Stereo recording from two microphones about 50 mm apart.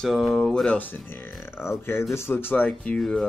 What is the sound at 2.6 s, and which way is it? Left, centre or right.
Speech, left.